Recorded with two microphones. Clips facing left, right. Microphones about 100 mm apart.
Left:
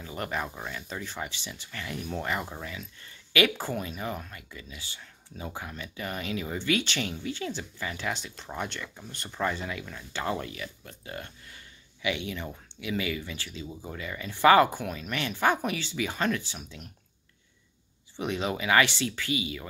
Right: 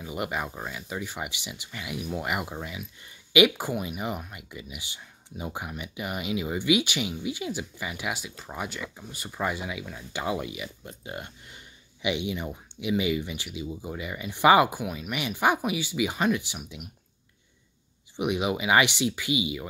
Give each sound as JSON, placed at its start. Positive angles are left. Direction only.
{"t": 0.0, "sound": "speech", "side_deg": -15}
{"t": 18.1, "sound": "speech", "side_deg": -15}